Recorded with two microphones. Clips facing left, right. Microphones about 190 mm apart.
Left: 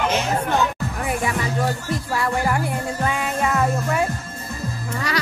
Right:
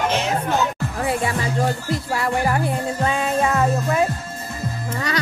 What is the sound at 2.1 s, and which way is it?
Music, 25° right (ahead or behind).